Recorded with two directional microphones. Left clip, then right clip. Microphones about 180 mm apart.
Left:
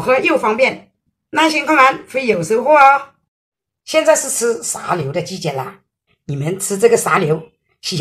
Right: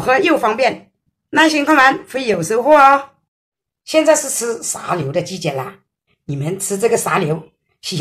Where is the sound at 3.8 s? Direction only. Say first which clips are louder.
Even; centre (ahead or behind).